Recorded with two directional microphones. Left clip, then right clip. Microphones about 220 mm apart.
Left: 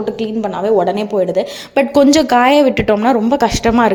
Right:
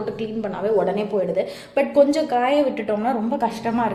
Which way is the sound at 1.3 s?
45° left (ahead or behind).